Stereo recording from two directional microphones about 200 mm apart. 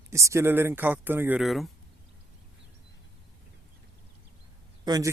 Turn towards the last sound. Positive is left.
turn(degrees=-20)  # may be behind; listen again after turning